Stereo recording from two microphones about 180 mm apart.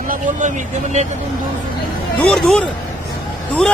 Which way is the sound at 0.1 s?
45° right (ahead or behind).